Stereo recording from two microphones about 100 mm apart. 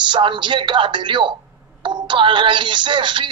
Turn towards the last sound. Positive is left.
turn(degrees=-55)  # may be behind; listen again after turning